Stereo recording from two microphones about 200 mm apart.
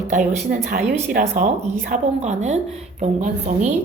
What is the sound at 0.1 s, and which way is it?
A woman's voice, 35° right (ahead or behind).